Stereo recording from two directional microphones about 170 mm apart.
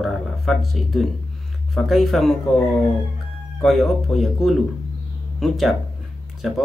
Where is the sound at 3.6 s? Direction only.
Centre (ahead or behind).